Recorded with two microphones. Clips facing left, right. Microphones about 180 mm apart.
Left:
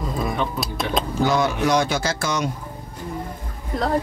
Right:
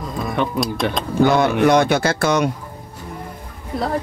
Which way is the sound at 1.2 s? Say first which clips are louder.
Right 7 dB; 60° right (ahead or behind).